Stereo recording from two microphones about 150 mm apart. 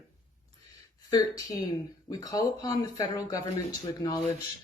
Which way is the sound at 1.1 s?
25° left (ahead or behind).